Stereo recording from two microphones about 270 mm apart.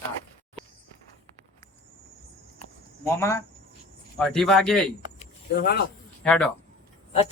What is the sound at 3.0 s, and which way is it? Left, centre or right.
Speech, centre.